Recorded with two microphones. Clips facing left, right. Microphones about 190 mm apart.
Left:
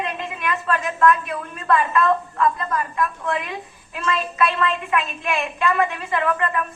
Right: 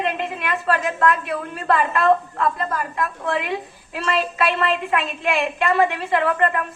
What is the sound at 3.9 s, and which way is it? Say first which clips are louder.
A woman's voice: right 1 dB; 35° right (ahead or behind).